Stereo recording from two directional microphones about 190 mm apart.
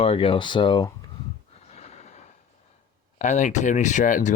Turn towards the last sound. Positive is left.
turn(degrees=45)  # may be behind; listen again after turning